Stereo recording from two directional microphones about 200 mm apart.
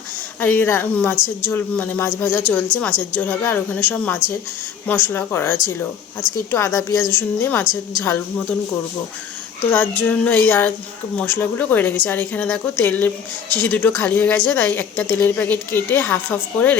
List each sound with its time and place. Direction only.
0.3 s a woman's voice: 10° left (ahead or behind)
9.7 s a woman's voice: 10° left (ahead or behind)